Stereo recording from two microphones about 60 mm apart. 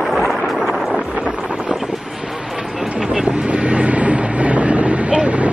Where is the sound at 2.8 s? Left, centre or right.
Centre.